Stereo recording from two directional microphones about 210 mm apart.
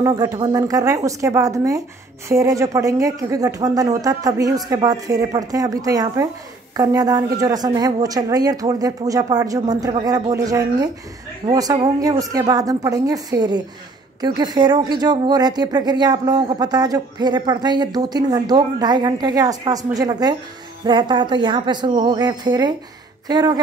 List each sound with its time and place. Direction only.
0.0 s speech: 15° right (ahead or behind)